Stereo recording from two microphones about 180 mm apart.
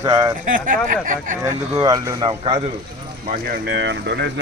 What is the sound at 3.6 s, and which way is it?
Speech, 75° right (ahead or behind).